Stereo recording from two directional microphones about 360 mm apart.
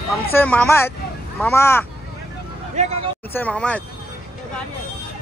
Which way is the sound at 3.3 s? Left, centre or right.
Centre.